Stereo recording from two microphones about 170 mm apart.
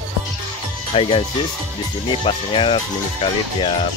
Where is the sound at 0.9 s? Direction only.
35° left (ahead or behind).